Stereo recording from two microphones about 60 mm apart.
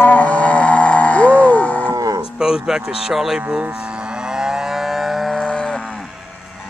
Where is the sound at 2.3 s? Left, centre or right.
Centre.